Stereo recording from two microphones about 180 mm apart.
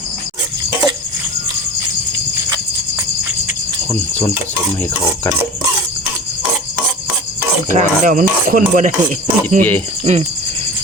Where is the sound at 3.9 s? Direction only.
10° left (ahead or behind).